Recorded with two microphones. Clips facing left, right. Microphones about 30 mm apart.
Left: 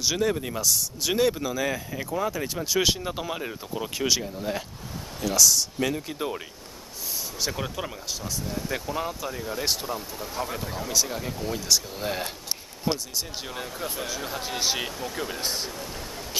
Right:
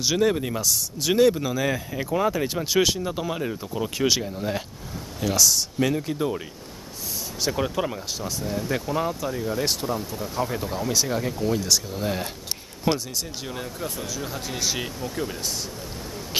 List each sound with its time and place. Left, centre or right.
0.0 s speech: centre
2.8 s speech: centre
4.0 s speech: centre
6.1 s speech: centre
7.4 s speech: centre
12.9 s speech: right
13.5 s speech: centre
13.9 s speech: left
14.2 s speech: centre
15.4 s speech: left